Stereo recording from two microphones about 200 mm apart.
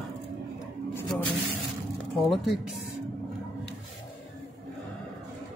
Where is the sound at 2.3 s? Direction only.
Centre (ahead or behind).